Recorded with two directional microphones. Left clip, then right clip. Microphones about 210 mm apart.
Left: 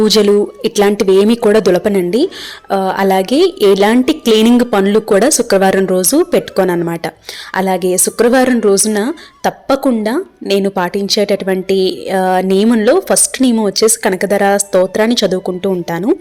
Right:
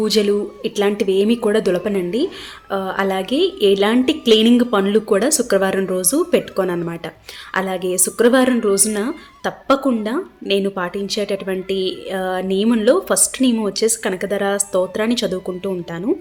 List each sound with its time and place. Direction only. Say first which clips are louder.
0.0 s a woman's voice: left 7 dB; 30° left (ahead or behind)